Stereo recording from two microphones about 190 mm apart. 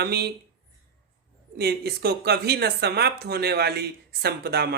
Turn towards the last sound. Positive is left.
turn(degrees=-60)  # may be behind; listen again after turning